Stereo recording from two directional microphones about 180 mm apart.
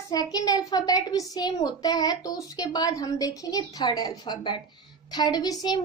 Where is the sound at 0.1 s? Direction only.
20° left (ahead or behind).